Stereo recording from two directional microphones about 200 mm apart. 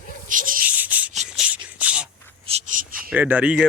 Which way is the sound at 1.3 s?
5° right (ahead or behind).